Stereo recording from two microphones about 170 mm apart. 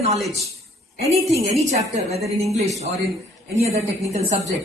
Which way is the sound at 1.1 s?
40° right (ahead or behind).